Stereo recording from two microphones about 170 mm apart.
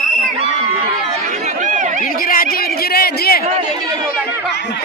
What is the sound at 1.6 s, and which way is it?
Chatter, 45° right (ahead or behind).